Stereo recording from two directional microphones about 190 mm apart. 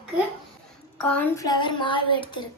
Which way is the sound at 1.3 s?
20° left (ahead or behind).